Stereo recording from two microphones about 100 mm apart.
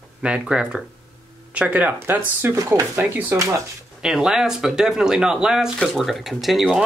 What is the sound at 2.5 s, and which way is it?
Speech, 35° right (ahead or behind).